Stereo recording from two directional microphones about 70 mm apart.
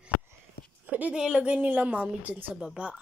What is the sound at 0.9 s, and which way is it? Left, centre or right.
A woman's voice, right.